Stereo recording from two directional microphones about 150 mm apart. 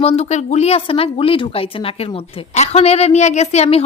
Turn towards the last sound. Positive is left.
turn(degrees=45)  # may be behind; listen again after turning